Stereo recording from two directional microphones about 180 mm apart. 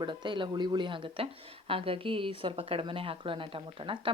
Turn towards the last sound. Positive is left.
turn(degrees=-30)  # may be behind; listen again after turning